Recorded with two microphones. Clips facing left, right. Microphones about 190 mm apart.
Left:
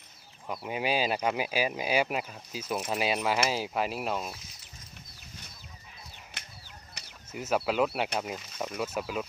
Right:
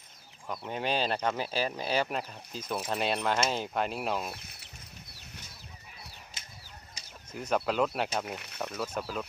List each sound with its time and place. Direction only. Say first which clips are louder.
0.4 s speech: left 2 dB; 5° left (ahead or behind)
4.3 s speech: right 1 dB; 60° right (ahead or behind)
6.4 s a sound: left 1 dB; 60° left (ahead or behind)
7.3 s speech: left 1 dB; 5° left (ahead or behind)